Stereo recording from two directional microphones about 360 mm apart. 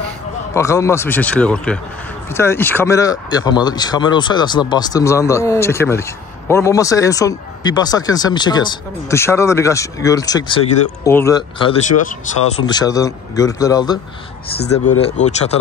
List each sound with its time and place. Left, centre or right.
0.6 s speech: centre
14.7 s speech: left
15.1 s speech: centre